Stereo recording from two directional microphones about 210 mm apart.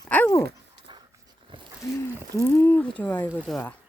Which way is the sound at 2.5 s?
10° left (ahead or behind).